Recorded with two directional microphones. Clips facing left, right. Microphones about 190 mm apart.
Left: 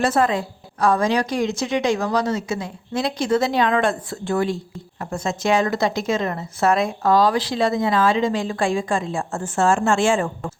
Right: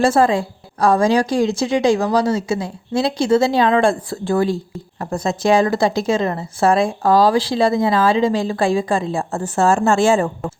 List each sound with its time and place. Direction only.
0.0 s a woman's voice: 30° right (ahead or behind)